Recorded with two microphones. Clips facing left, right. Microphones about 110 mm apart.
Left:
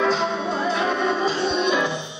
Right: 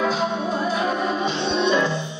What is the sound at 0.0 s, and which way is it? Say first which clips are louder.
Music: left 1 dB; 5° right (ahead or behind).